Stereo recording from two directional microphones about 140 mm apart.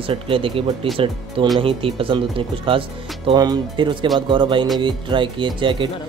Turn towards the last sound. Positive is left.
turn(degrees=-35)  # may be behind; listen again after turning